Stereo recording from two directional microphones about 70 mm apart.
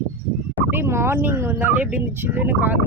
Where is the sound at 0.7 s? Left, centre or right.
Right.